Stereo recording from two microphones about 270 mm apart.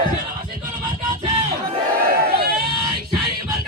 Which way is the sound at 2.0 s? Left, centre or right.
Right.